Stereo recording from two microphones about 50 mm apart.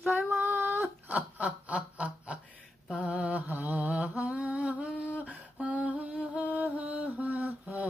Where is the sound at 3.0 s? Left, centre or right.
Right.